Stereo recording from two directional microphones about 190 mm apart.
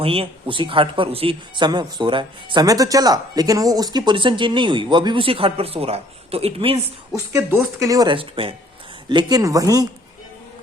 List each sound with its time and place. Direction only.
0.0 s speech: 30° right (ahead or behind)
7.3 s speech: 15° right (ahead or behind)